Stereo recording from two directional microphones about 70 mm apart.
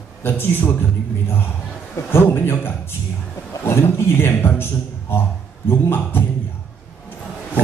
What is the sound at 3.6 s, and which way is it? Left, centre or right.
A man's voice, left.